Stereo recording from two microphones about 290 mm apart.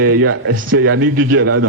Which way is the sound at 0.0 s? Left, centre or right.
Right.